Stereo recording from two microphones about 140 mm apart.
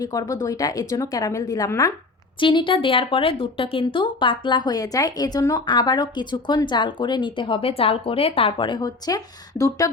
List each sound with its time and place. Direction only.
0.0 s a woman's voice: 25° left (ahead or behind)
2.4 s speech: 35° left (ahead or behind)